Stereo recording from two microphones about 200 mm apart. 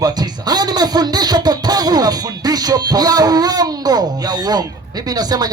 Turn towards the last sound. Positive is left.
turn(degrees=-20)  # may be behind; listen again after turning